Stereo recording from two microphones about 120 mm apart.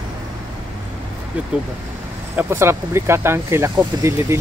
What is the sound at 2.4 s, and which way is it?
Speech, 20° right (ahead or behind).